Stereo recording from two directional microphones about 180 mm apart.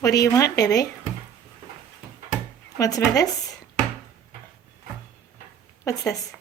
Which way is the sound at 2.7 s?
20° left (ahead or behind).